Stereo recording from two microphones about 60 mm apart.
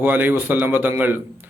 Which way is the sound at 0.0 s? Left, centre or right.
Right.